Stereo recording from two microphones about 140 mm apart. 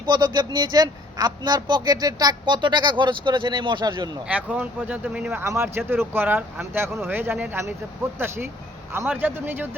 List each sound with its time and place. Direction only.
0.0 s a man's voice: 30° right (ahead or behind)
4.3 s speech: 10° right (ahead or behind)
8.9 s speech: 15° right (ahead or behind)